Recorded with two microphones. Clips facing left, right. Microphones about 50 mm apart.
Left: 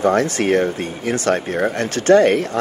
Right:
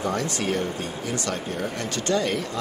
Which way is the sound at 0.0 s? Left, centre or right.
Left.